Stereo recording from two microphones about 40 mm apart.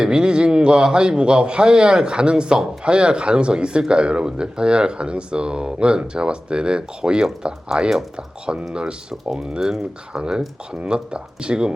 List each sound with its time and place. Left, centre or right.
0.0 s speech: right